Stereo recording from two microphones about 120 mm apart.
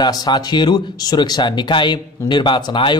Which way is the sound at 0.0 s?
35° left (ahead or behind).